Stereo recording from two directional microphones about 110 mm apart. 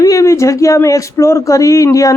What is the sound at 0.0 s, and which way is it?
Speech, 30° left (ahead or behind).